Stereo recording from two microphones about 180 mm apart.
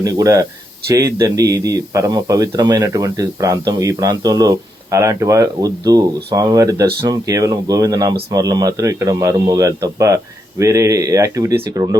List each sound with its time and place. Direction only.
0.0 s speech: 20° right (ahead or behind)